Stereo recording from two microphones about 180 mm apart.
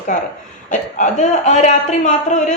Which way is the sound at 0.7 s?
40° left (ahead or behind).